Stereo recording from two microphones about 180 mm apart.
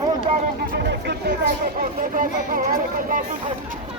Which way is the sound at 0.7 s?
65° right (ahead or behind).